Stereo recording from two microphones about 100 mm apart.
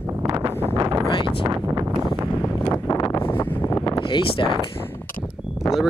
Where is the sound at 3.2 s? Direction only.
20° left (ahead or behind).